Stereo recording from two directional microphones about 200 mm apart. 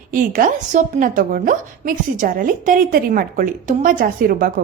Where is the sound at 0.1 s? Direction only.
45° right (ahead or behind).